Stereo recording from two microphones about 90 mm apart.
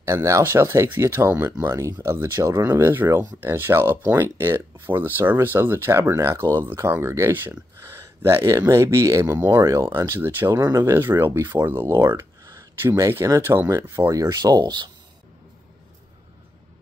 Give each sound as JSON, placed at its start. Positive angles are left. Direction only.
{"t": 0.0, "sound": "speech", "side_deg": -35}